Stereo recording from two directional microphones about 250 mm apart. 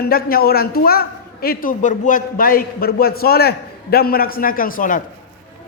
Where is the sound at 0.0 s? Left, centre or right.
Left.